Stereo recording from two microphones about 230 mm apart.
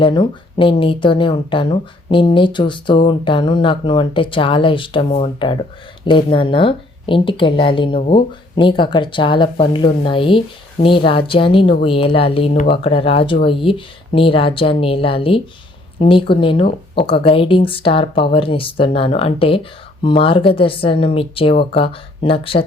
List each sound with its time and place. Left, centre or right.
0.0 s speech: left
16.6 s speech: left
17.1 s speech: left